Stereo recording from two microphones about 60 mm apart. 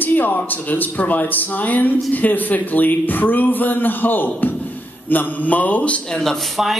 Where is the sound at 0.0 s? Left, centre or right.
Left.